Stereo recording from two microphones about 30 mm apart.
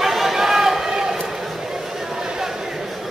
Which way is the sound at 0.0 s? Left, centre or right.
Centre.